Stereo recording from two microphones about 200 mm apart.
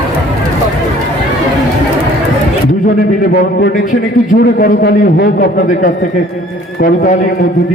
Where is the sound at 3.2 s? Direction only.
50° left (ahead or behind).